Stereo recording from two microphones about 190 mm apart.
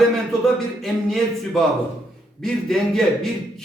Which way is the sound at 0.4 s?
Centre (ahead or behind).